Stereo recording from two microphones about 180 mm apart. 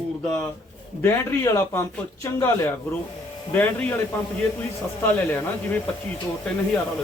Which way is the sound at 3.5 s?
10° left (ahead or behind).